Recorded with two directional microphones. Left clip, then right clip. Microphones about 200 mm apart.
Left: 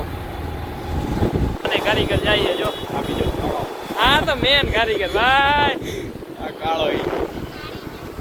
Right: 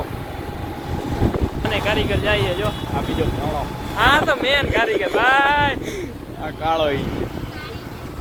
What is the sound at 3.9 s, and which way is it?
Speech, 15° right (ahead or behind).